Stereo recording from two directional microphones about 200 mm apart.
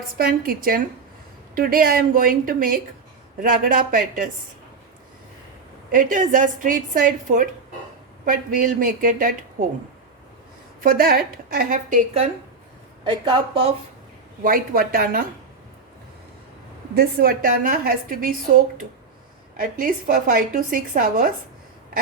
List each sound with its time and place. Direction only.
0.2 s a woman's voice: 45° right (ahead or behind)
5.9 s a woman's voice: 40° right (ahead or behind)
10.8 s a woman's voice: 50° right (ahead or behind)
13.1 s a woman's voice: 25° right (ahead or behind)
14.4 s a woman's voice: 45° right (ahead or behind)
16.9 s a woman's voice: 50° right (ahead or behind)